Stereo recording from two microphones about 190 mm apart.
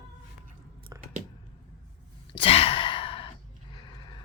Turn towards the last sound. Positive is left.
turn(degrees=30)  # may be behind; listen again after turning